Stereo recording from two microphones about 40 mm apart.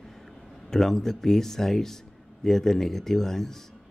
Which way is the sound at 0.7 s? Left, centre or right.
Centre.